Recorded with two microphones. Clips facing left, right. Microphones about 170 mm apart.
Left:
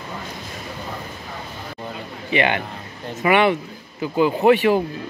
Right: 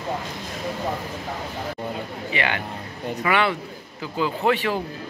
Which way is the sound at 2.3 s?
20° left (ahead or behind).